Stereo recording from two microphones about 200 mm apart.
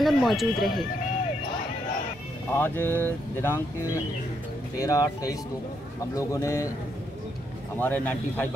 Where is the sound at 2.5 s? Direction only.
10° left (ahead or behind).